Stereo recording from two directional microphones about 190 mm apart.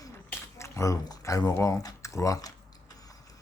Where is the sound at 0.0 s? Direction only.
15° left (ahead or behind).